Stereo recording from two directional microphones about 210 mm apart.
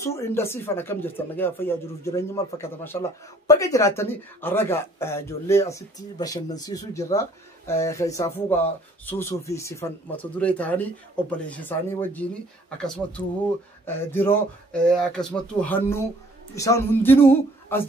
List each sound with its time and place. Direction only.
0.0 s speech: 15° left (ahead or behind)